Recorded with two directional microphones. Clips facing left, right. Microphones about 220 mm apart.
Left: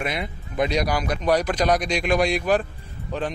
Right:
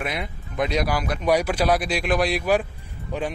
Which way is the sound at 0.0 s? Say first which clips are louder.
Left 1 dB; centre (ahead or behind).